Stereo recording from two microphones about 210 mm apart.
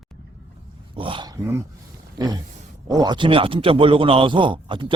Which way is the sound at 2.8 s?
20° right (ahead or behind).